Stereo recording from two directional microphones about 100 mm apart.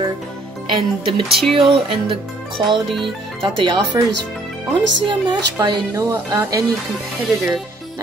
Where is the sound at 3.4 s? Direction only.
55° right (ahead or behind).